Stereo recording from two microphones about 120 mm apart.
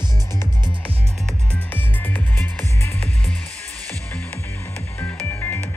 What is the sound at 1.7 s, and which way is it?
Music, 15° left (ahead or behind).